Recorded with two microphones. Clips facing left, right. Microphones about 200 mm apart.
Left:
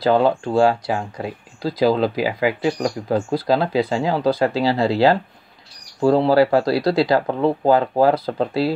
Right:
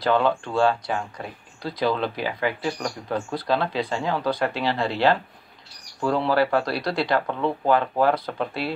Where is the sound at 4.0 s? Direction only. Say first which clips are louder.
Left 4 dB; 30° left (ahead or behind).